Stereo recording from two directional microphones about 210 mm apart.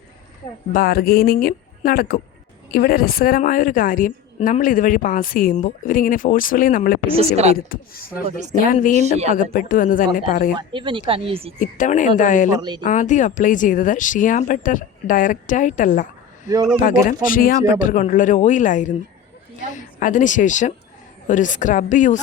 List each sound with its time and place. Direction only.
0.7 s a woman's voice: 45° left (ahead or behind)
7.2 s speech: 30° right (ahead or behind)
7.5 s a woman's voice: 45° left (ahead or behind)
8.9 s speech: 30° right (ahead or behind)
9.3 s a woman's voice: 40° left (ahead or behind)
10.6 s speech: 25° right (ahead or behind)
11.6 s a woman's voice: 35° left (ahead or behind)
12.5 s speech: 20° right (ahead or behind)
12.8 s a woman's voice: 35° left (ahead or behind)